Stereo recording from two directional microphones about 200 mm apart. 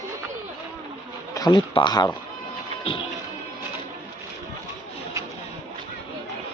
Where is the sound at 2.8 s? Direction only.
25° left (ahead or behind).